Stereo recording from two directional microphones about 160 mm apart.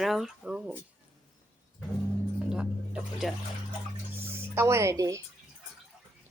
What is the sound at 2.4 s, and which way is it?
Music, 5° right (ahead or behind).